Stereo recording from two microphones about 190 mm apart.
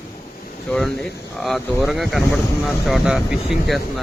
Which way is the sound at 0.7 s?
5° left (ahead or behind).